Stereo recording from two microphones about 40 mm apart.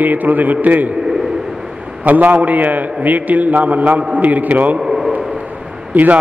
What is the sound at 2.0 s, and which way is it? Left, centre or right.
A man's voice, right.